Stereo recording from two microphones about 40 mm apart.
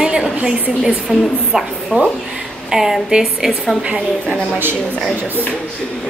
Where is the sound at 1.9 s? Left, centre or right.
Right.